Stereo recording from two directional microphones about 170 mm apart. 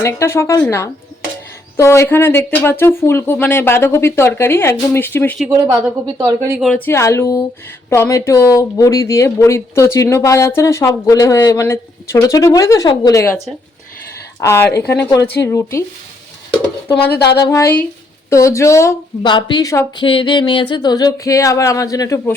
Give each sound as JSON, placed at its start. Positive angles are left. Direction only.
{"t": 0.0, "sound": "speech", "side_deg": 15}
{"t": 6.1, "sound": "speech", "side_deg": -20}
{"t": 6.6, "sound": "speech", "side_deg": 5}
{"t": 13.2, "sound": "speech", "side_deg": 0}
{"t": 14.4, "sound": "speech", "side_deg": 15}
{"t": 17.1, "sound": "speech", "side_deg": 75}
{"t": 17.5, "sound": "speech", "side_deg": 15}
{"t": 20.1, "sound": "speech", "side_deg": 30}